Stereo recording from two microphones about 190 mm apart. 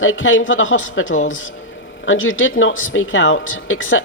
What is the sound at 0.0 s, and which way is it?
Speech, 90° left.